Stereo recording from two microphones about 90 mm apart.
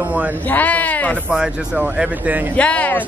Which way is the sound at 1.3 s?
10° right (ahead or behind).